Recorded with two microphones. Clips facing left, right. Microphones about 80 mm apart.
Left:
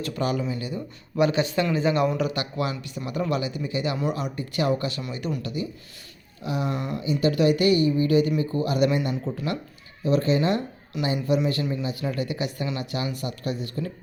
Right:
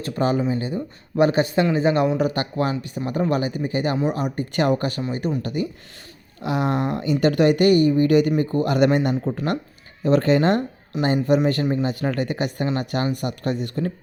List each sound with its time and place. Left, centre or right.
0.0 s speech: right
1.6 s speech: right
6.4 s speech: right